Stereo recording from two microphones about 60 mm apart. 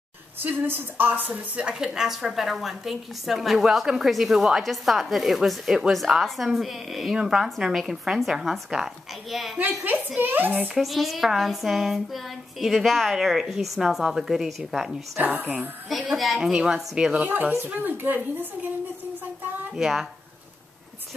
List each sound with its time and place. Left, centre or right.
0.4 s a woman's voice: right
1.7 s a woman's voice: centre
10.1 s a woman's voice: right
10.7 s a woman's voice: centre
15.1 s a woman's voice: right
15.9 s a woman's voice: centre
17.6 s a woman's voice: right
19.7 s a woman's voice: centre